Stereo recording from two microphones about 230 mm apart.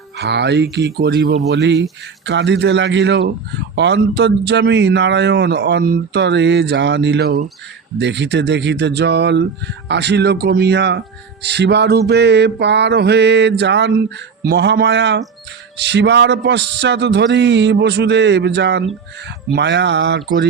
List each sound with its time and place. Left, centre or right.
0.2 s speech: right